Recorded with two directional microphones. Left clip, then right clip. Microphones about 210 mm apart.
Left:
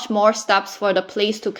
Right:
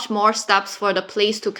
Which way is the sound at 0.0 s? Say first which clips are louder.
Left 1 dB; 25° left (ahead or behind).